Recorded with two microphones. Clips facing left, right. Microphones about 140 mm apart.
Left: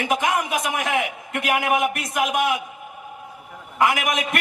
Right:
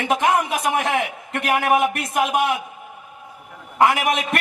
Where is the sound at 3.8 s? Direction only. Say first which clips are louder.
Right 3 dB; 30° right (ahead or behind).